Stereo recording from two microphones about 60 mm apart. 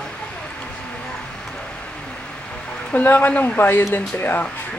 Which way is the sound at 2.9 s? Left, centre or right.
Left.